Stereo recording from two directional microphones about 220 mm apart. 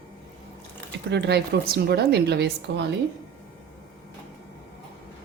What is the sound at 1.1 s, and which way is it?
A woman's voice, 50° right (ahead or behind).